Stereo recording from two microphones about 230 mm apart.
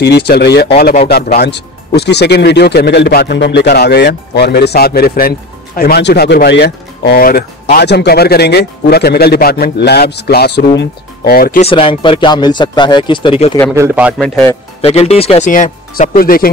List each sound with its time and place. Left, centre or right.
0.0 s speech: left
11.6 s speech: left
13.7 s a man's voice: centre
14.2 s speech: centre
14.8 s speech: left